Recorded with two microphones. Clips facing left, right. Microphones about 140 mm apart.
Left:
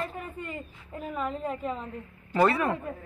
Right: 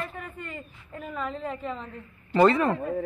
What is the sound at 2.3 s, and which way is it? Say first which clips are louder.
Speech: right 4 dB; 5° left (ahead or behind).